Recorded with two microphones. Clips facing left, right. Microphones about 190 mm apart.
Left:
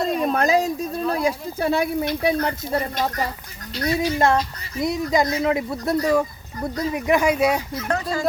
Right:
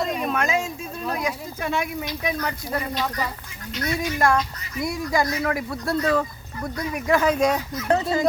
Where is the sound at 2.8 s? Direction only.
45° left (ahead or behind).